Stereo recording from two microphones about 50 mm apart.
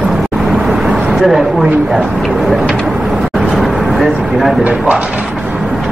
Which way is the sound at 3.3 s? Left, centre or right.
Centre.